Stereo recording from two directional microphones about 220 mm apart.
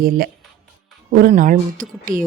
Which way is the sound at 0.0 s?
40° right (ahead or behind).